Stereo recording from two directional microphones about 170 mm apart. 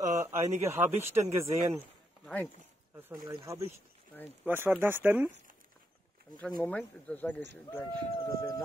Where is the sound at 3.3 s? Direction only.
20° right (ahead or behind).